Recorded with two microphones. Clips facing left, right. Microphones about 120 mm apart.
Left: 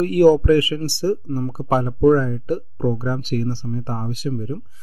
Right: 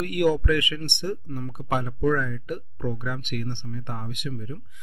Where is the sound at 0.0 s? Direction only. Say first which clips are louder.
Left 9 dB; 35° left (ahead or behind).